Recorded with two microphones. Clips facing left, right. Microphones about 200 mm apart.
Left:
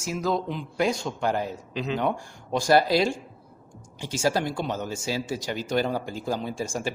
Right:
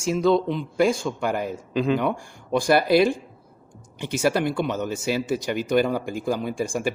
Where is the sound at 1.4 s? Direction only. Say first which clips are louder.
Right 5 dB; 50° right (ahead or behind).